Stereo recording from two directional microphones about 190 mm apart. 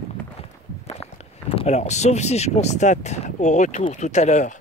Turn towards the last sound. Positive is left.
turn(degrees=35)  # may be behind; listen again after turning